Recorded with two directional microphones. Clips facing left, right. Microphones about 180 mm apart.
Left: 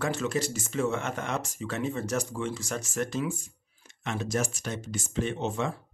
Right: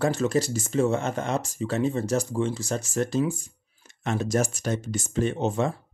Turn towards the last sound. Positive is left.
turn(degrees=-40)  # may be behind; listen again after turning